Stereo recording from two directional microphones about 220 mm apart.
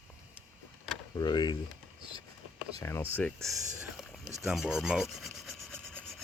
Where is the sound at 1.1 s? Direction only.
20° left (ahead or behind).